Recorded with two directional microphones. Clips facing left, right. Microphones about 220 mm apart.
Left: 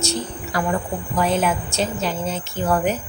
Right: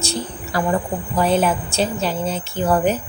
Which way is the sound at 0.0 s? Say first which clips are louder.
Left 1 dB; 30° right (ahead or behind).